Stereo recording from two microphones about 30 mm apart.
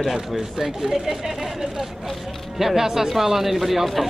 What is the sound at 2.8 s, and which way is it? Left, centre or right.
Speech, centre.